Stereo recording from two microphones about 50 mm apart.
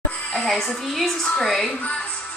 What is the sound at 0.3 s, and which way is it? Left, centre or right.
A woman's voice, centre.